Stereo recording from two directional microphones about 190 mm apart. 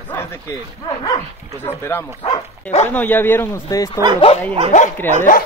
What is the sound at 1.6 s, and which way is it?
Speech, 10° left (ahead or behind).